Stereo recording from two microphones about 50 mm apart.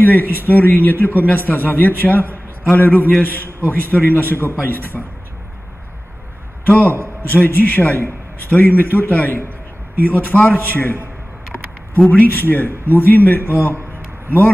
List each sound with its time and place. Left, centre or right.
0.0 s a man's voice: left
6.6 s a man's voice: left
12.1 s a man's voice: left